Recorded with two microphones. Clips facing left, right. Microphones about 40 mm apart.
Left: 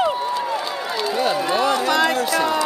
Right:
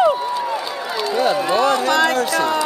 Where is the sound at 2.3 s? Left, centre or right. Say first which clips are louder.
Right 1 dB; centre.